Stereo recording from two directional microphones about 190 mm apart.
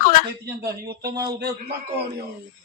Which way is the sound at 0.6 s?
55° right (ahead or behind).